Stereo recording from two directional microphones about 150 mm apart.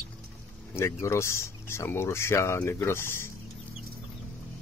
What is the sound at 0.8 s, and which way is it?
Speech, 20° left (ahead or behind).